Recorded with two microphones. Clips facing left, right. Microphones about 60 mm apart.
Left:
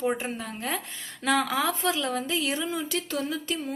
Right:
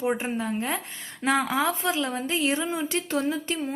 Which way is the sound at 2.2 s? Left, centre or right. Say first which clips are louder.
Right 3 dB; right.